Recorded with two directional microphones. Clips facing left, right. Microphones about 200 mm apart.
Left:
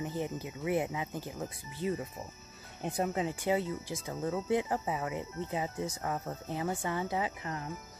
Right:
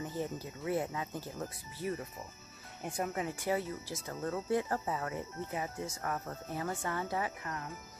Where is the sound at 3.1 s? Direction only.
20° left (ahead or behind).